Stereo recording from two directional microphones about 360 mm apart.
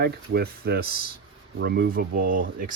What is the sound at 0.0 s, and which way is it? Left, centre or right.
Speech, right.